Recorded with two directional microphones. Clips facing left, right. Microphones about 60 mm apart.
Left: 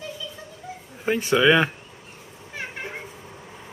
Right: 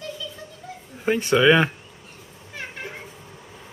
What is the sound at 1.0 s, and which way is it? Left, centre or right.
Speech, centre.